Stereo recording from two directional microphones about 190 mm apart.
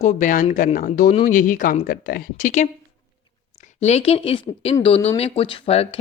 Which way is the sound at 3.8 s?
35° left (ahead or behind).